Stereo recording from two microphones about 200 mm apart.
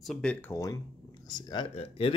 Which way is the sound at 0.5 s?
15° left (ahead or behind).